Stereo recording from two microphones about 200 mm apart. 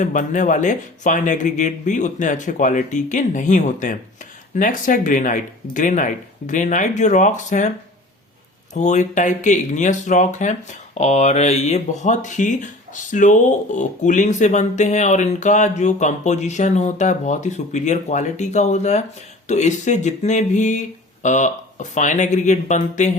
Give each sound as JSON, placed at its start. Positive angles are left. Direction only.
{"t": 0.0, "sound": "speech", "side_deg": 40}
{"t": 8.7, "sound": "speech", "side_deg": 35}